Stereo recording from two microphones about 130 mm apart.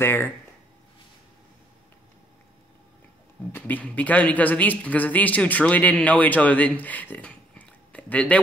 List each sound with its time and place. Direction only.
0.0 s speech: 20° left (ahead or behind)
3.5 s speech: 15° left (ahead or behind)